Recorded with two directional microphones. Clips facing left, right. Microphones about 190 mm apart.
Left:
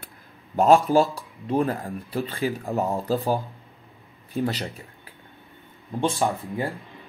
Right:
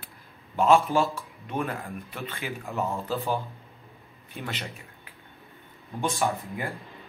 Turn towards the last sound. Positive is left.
turn(degrees=30)  # may be behind; listen again after turning